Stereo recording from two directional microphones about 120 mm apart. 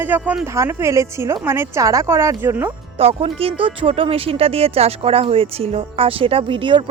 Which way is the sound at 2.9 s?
55° right (ahead or behind).